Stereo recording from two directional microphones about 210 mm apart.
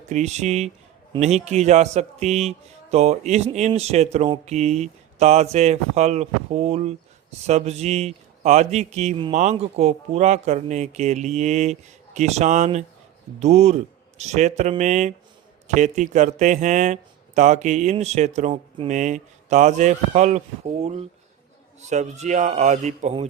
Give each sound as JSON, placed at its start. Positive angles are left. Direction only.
{"t": 0.1, "sound": "a man's voice", "side_deg": -35}